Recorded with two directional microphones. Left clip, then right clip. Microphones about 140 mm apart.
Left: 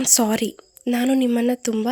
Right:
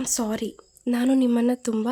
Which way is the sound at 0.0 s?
25° left (ahead or behind).